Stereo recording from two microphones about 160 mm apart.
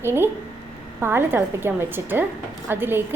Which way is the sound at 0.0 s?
15° right (ahead or behind).